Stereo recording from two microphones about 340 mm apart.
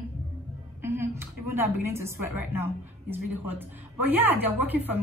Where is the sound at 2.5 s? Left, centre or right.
Centre.